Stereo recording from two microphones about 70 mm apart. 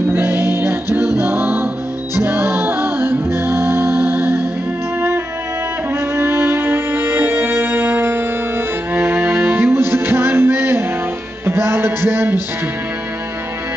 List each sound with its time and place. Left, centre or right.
0.1 s music: right
6.1 s music: right